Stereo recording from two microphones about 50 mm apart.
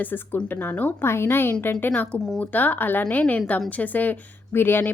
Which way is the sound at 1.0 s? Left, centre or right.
Left.